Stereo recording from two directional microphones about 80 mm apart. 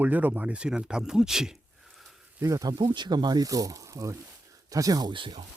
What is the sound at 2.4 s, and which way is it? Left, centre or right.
Speech, right.